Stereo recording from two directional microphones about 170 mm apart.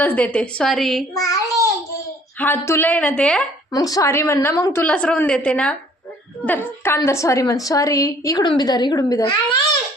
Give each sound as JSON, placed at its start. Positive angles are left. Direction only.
{"t": 0.0, "sound": "a woman's voice", "side_deg": 10}
{"t": 1.1, "sound": "a child's voice", "side_deg": 20}
{"t": 3.7, "sound": "a woman's voice", "side_deg": 20}